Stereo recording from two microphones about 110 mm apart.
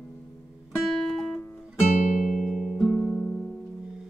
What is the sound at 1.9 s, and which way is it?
Music, 90° left.